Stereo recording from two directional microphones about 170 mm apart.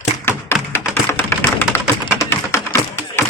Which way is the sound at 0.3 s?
15° left (ahead or behind).